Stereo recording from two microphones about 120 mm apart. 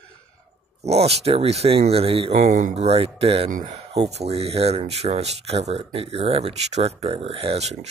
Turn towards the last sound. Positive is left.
turn(degrees=-60)  # may be behind; listen again after turning